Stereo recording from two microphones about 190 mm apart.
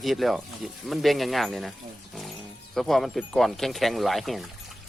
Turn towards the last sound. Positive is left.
turn(degrees=0)  # may be behind; listen again after turning